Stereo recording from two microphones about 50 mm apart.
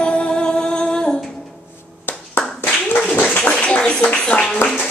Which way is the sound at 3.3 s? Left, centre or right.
Left.